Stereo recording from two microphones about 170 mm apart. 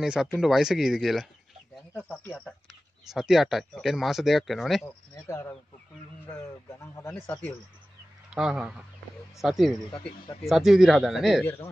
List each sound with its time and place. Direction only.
0.0 s a man's voice: 5° right (ahead or behind)
3.1 s speech: 5° right (ahead or behind)
4.8 s a man's voice: 15° left (ahead or behind)
8.3 s speech: 5° right (ahead or behind)